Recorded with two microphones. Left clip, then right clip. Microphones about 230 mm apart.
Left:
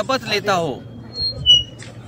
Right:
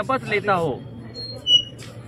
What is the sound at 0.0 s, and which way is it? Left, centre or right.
Speech, left.